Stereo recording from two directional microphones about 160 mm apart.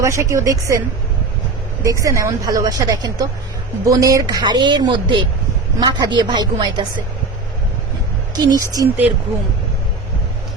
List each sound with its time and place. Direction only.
0.0 s a woman's voice: 20° right (ahead or behind)
1.8 s a woman's voice: 20° right (ahead or behind)
8.4 s a woman's voice: 20° right (ahead or behind)